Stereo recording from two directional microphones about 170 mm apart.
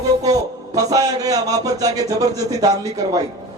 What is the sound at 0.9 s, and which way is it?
Speech, 20° right (ahead or behind).